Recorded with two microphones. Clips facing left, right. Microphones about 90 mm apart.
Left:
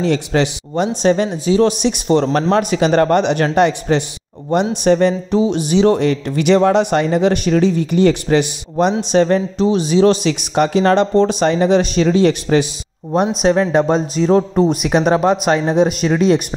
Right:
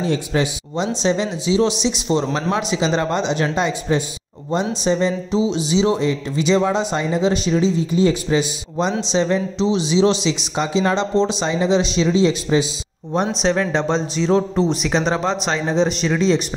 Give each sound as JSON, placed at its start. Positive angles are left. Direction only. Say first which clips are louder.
{"t": 0.0, "sound": "speech", "louder": "left 4 dB", "side_deg": 70}
{"t": 0.7, "sound": "speech", "louder": "left 5 dB", "side_deg": 50}
{"t": 13.4, "sound": "speech", "louder": "left 6 dB", "side_deg": 35}